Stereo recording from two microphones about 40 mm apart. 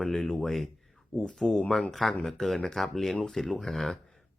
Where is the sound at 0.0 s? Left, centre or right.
Centre.